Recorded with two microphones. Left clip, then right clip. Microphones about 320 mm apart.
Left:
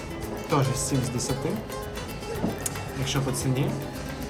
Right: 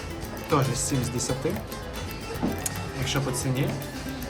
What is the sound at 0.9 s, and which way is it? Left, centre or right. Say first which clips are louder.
Speech: even; centre.